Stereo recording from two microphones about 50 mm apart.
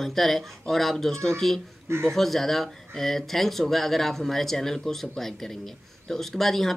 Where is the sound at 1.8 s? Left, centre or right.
Right.